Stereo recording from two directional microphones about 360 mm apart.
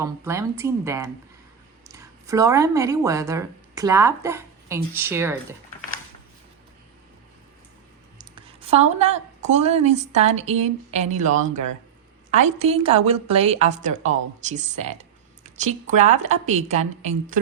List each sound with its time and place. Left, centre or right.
0.0 s a woman's voice: centre
8.2 s a woman's voice: centre